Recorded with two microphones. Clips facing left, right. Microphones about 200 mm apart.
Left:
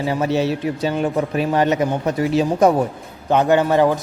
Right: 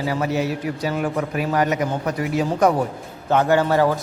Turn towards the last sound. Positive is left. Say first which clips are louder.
# left 2 dB
turn(degrees=20)  # may be behind; listen again after turning